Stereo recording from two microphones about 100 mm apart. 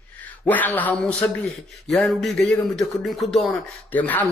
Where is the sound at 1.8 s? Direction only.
Centre (ahead or behind).